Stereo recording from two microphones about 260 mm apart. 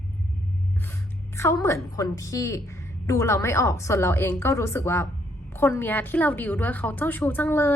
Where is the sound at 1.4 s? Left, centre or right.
Centre.